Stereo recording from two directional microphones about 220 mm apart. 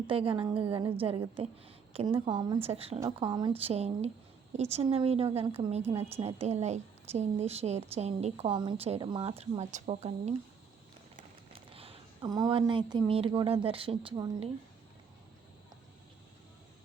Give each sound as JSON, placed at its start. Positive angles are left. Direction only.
{"t": 0.1, "sound": "a woman's voice", "side_deg": -25}
{"t": 11.5, "sound": "speech", "side_deg": -25}